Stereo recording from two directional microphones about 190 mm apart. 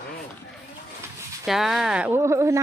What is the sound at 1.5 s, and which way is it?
Speech, centre (ahead or behind).